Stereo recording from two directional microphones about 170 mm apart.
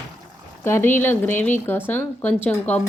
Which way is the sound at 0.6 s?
15° left (ahead or behind).